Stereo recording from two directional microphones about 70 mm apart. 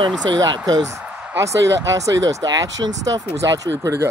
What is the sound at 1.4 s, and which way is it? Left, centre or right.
Speech, right.